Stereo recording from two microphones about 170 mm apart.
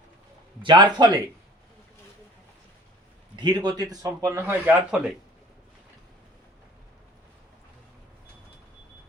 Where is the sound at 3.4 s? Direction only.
25° right (ahead or behind).